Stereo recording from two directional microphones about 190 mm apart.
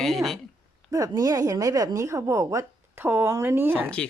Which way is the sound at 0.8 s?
20° right (ahead or behind).